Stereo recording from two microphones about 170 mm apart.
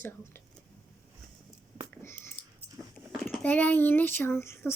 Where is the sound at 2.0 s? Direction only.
15° left (ahead or behind).